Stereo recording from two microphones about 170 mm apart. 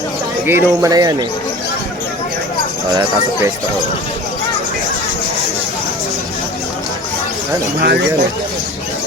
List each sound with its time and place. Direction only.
0.4 s speech: 15° right (ahead or behind)
2.9 s speech: 25° right (ahead or behind)
7.8 s speech: 75° right (ahead or behind)